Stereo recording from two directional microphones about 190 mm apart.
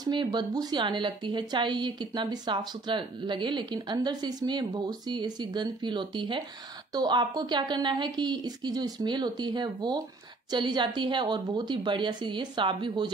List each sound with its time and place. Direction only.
0.0 s a woman's voice: 25° right (ahead or behind)